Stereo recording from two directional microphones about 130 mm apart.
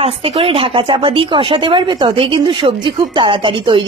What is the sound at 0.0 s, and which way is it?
Speech, 45° right (ahead or behind).